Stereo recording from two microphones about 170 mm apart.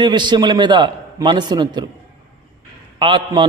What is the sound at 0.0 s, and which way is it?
A man's voice, 25° right (ahead or behind).